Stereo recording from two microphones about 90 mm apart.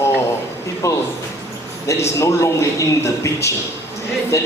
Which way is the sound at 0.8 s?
35° left (ahead or behind).